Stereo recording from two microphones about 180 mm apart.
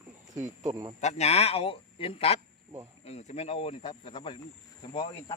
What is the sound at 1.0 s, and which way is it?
Speech, 40° left (ahead or behind).